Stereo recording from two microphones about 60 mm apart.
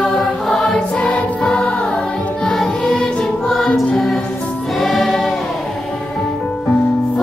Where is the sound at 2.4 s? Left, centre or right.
Centre.